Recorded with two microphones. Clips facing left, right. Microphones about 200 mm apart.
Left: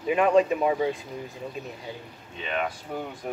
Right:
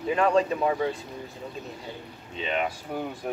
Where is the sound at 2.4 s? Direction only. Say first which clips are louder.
Right 1 dB; 20° right (ahead or behind).